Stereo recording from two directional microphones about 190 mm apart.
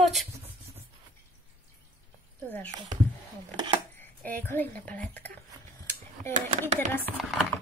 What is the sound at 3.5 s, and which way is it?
Speech, 25° right (ahead or behind).